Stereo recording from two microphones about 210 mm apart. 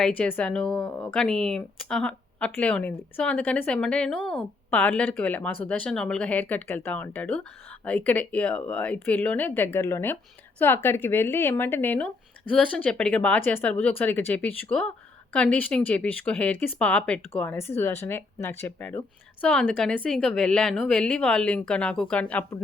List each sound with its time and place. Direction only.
0.0 s speech: 5° left (ahead or behind)